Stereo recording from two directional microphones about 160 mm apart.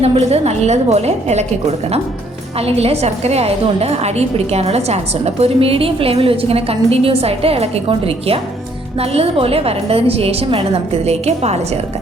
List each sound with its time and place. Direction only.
0.0 s a woman's voice: 40° right (ahead or behind)
2.6 s a woman's voice: 40° right (ahead or behind)